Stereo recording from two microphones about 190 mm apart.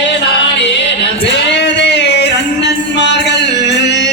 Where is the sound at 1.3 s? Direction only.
65° left (ahead or behind).